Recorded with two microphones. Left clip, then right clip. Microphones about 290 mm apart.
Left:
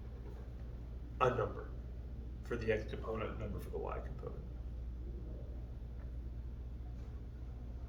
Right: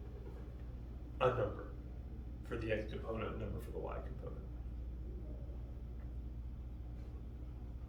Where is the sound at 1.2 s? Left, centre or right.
Centre.